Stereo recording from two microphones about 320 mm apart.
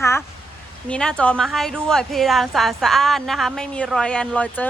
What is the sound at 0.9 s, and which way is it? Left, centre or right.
A woman's voice, centre.